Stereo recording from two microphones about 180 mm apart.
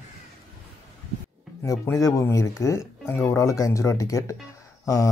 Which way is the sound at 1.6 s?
15° left (ahead or behind).